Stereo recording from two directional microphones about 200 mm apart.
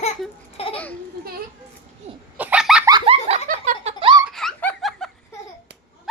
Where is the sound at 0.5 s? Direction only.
30° left (ahead or behind).